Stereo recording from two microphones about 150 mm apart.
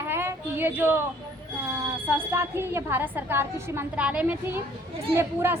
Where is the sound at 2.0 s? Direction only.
15° right (ahead or behind).